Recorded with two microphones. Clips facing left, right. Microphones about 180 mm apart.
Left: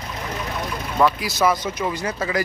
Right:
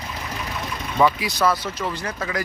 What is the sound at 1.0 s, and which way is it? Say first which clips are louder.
Speech: even; centre (ahead or behind).